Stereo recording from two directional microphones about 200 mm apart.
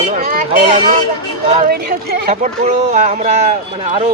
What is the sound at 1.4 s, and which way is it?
Speech, 30° right (ahead or behind).